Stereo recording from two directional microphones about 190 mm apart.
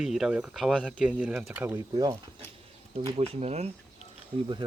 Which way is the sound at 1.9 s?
20° right (ahead or behind).